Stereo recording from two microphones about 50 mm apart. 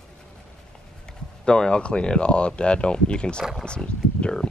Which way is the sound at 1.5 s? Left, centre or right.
Centre.